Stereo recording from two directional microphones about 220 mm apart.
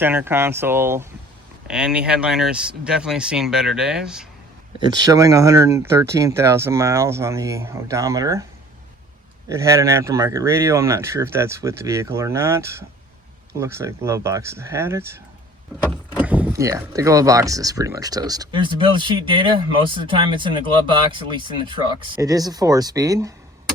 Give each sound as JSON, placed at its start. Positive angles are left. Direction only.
{"t": 0.0, "sound": "speech", "side_deg": -10}
{"t": 4.9, "sound": "speech", "side_deg": -15}
{"t": 9.5, "sound": "speech", "side_deg": -15}